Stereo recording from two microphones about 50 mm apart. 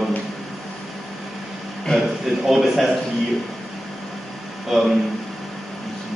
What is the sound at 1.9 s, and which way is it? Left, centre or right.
Speech, centre.